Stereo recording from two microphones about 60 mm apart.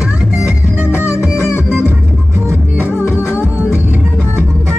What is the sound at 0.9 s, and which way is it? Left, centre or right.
Music, left.